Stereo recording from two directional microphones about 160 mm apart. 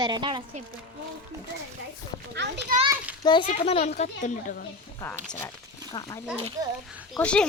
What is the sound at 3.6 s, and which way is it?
A child's voice, 40° left (ahead or behind).